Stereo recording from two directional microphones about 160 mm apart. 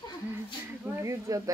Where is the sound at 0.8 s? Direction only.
15° right (ahead or behind).